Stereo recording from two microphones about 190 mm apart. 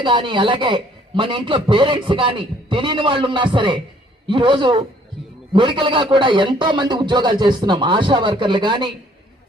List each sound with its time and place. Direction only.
0.0 s a man's voice: 25° right (ahead or behind)